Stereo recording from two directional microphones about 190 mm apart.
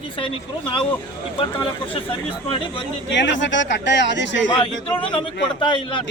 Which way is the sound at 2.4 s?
25° left (ahead or behind).